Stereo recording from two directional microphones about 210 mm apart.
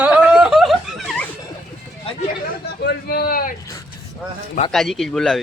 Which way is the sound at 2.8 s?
50° left (ahead or behind).